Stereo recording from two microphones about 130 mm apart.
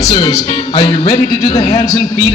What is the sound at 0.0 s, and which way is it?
Speech, 30° left (ahead or behind).